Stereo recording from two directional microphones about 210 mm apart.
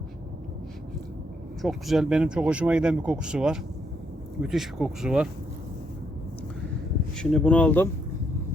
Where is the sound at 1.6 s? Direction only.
Centre (ahead or behind).